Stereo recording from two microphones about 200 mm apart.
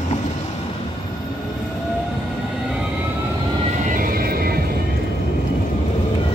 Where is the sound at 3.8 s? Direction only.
45° right (ahead or behind).